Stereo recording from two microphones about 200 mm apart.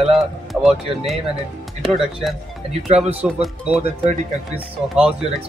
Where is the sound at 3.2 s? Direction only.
5° right (ahead or behind).